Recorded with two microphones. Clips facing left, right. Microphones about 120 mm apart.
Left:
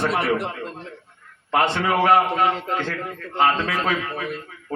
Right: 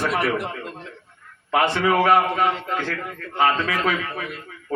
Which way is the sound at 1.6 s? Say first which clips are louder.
Right 1 dB; 25° left (ahead or behind).